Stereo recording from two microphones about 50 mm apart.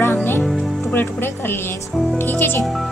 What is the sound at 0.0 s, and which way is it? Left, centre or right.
Music, left.